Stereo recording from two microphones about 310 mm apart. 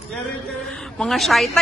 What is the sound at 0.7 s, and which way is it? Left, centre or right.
Speech, centre.